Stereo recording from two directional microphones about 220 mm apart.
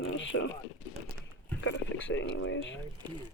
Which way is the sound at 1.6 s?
55° left (ahead or behind).